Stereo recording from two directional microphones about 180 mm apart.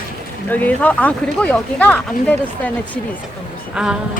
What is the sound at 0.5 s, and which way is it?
Speech, 10° left (ahead or behind).